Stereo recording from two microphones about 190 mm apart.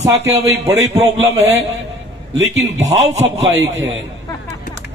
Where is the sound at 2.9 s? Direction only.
35° right (ahead or behind).